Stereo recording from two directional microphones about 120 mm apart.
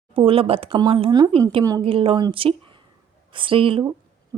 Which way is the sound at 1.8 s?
50° right (ahead or behind).